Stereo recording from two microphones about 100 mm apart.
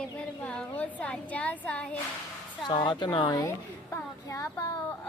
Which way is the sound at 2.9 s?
50° left (ahead or behind).